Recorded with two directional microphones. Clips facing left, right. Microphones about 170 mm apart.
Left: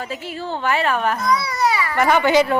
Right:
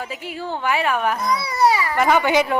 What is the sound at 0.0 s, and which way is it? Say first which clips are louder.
Speech: left 1 dB; 15° right (ahead or behind).